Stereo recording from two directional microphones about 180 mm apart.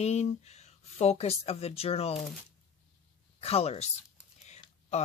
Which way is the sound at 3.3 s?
35° left (ahead or behind).